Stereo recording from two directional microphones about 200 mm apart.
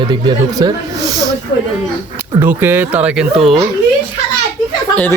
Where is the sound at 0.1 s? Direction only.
20° right (ahead or behind).